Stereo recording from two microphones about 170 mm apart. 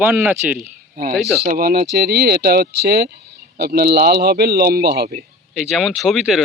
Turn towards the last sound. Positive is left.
turn(degrees=0)  # may be behind; listen again after turning